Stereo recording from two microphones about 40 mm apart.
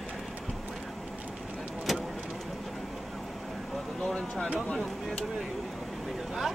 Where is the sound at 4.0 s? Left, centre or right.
Left.